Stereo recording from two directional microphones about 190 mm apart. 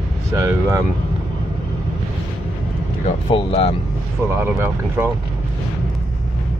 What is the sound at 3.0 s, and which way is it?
Speech, 30° left (ahead or behind).